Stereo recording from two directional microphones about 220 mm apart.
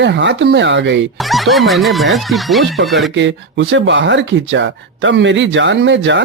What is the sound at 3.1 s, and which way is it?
Speech, 55° right (ahead or behind).